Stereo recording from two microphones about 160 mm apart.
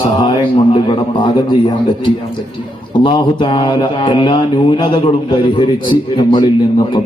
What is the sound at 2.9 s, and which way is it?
A man's voice, 30° left (ahead or behind).